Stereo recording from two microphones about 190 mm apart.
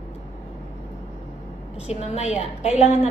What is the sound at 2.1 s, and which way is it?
Speech, 35° left (ahead or behind).